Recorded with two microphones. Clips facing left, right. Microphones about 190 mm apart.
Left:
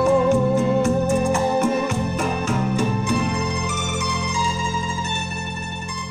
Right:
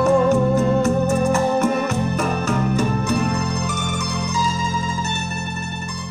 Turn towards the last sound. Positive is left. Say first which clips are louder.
# right 1 dB
turn(degrees=-40)  # may be behind; listen again after turning